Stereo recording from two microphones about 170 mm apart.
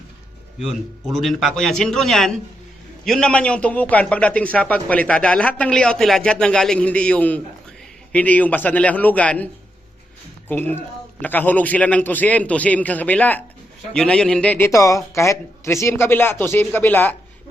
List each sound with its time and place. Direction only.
1.2 s a man's voice: centre (ahead or behind)
11.2 s a man's voice: 10° left (ahead or behind)
14.7 s a man's voice: 20° left (ahead or behind)